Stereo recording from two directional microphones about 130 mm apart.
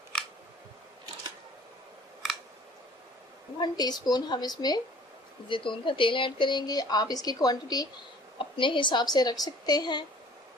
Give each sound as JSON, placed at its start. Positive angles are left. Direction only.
{"t": 3.6, "sound": "speech", "side_deg": 30}